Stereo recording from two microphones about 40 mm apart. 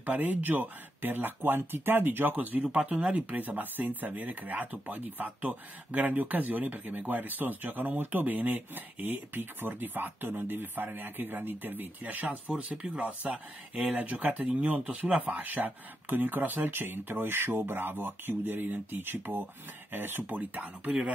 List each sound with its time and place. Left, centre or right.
0.0 s speech: right
2.3 s speech: right
3.3 s speech: right
9.7 s speech: right
12.0 s speech: right
12.7 s speech: centre
13.7 s speech: right